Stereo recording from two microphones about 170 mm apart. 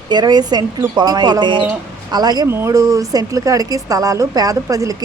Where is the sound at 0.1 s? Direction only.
25° right (ahead or behind).